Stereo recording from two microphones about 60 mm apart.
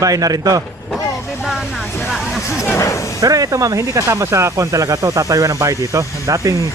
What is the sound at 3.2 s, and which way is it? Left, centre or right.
Speech, right.